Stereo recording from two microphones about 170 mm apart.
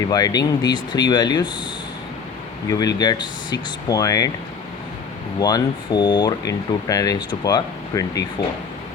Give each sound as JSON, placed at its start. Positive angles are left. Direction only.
{"t": 0.1, "sound": "speech", "side_deg": 20}
{"t": 2.6, "sound": "speech", "side_deg": 25}
{"t": 5.4, "sound": "speech", "side_deg": 25}